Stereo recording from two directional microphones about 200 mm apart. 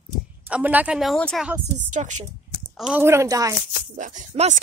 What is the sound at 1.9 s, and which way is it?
Speech, 35° right (ahead or behind).